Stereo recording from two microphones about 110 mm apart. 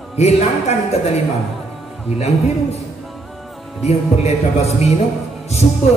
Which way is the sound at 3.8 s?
70° left (ahead or behind).